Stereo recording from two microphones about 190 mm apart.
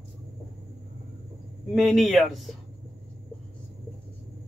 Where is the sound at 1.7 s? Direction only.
Centre (ahead or behind).